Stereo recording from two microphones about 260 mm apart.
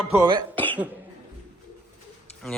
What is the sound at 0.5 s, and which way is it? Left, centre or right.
Cough, centre.